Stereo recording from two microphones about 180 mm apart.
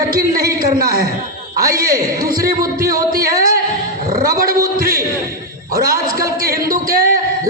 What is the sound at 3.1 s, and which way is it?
A man's voice, 55° right (ahead or behind).